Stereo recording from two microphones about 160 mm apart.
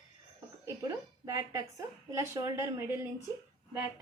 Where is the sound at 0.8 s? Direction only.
20° right (ahead or behind).